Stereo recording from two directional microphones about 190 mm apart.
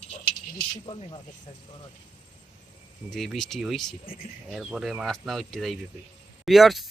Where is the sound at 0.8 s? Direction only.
30° left (ahead or behind).